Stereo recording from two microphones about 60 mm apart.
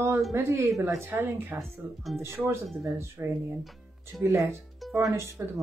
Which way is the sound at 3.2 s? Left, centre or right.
Right.